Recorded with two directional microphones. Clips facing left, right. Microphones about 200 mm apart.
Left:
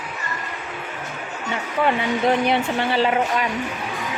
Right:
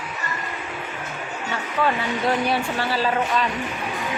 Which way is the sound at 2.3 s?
20° left (ahead or behind).